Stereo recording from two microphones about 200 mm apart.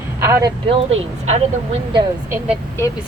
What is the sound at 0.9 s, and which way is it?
Speech, 35° right (ahead or behind).